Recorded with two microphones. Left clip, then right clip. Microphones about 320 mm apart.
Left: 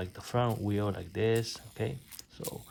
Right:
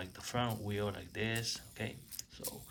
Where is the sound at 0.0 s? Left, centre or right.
Left.